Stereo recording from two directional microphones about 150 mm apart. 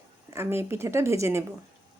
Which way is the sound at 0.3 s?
15° right (ahead or behind).